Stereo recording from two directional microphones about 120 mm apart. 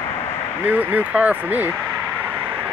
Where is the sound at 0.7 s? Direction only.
15° right (ahead or behind).